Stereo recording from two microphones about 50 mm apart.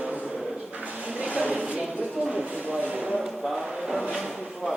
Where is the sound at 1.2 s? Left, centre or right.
Right.